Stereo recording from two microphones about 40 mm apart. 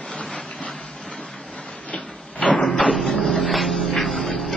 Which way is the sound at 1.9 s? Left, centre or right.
Left.